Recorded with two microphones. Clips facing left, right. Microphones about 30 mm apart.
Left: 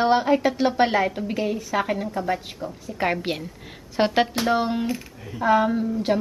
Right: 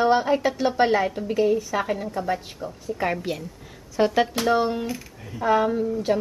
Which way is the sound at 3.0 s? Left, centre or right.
Left.